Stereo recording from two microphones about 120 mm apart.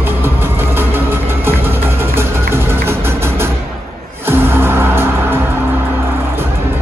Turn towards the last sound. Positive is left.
turn(degrees=-20)  # may be behind; listen again after turning